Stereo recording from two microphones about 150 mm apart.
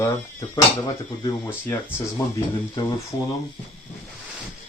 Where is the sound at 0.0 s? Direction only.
20° left (ahead or behind).